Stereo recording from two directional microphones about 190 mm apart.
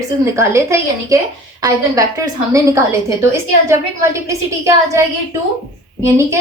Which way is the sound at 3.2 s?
15° right (ahead or behind).